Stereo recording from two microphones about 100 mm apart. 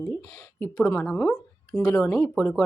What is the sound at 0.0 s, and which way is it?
Speech, 25° left (ahead or behind).